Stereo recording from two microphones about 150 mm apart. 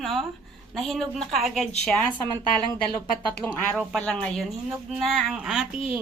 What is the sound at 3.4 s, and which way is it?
A woman's voice, 10° left (ahead or behind).